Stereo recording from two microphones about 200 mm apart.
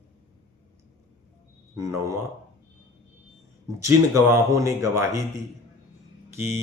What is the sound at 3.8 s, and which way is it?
Speech, 15° right (ahead or behind).